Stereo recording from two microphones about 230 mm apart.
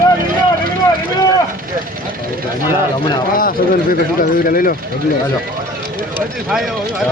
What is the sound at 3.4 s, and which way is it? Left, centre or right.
Speech, left.